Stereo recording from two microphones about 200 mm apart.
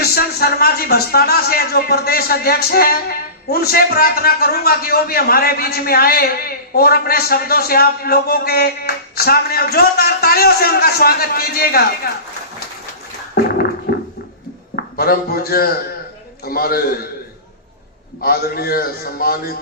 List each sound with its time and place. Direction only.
0.0 s a man's voice: 50° left (ahead or behind)
13.4 s a sound: 55° left (ahead or behind)
14.8 s a man's voice: 50° left (ahead or behind)
18.2 s a man's voice: 50° left (ahead or behind)